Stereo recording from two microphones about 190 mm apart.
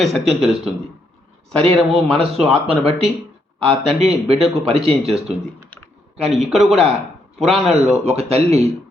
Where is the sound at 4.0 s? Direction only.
30° right (ahead or behind).